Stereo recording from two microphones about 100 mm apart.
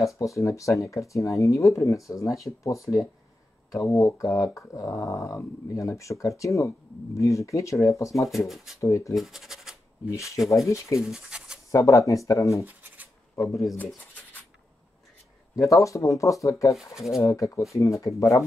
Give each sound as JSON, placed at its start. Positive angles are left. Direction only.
{"t": 0.0, "sound": "speech", "side_deg": 30}
{"t": 8.5, "sound": "speech", "side_deg": -5}
{"t": 8.7, "sound": "speech", "side_deg": 30}
{"t": 9.1, "sound": "speech", "side_deg": 0}
{"t": 10.1, "sound": "speech", "side_deg": 30}
{"t": 11.0, "sound": "scratch", "side_deg": -5}
{"t": 11.7, "sound": "speech", "side_deg": 35}
{"t": 12.6, "sound": "scratch", "side_deg": -15}
{"t": 13.4, "sound": "speech", "side_deg": 0}
{"t": 15.7, "sound": "speech", "side_deg": 30}